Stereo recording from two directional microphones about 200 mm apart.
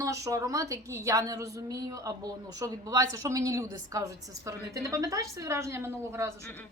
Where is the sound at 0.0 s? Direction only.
15° right (ahead or behind).